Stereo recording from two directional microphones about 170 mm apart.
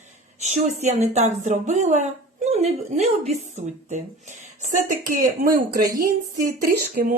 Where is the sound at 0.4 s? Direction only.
40° right (ahead or behind).